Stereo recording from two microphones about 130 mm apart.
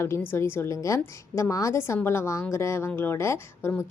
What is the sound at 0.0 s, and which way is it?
A woman's voice, 20° left (ahead or behind).